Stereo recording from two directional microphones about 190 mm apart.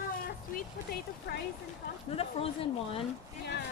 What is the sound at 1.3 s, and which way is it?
Speech, 60° left (ahead or behind).